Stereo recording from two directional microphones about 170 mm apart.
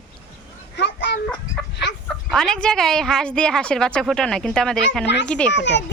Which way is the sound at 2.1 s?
Centre (ahead or behind).